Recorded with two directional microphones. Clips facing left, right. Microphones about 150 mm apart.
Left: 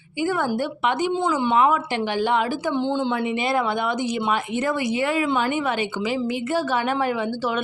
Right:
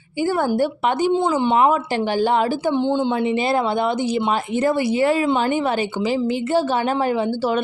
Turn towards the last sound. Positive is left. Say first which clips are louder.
# right 4 dB
turn(degrees=-35)  # may be behind; listen again after turning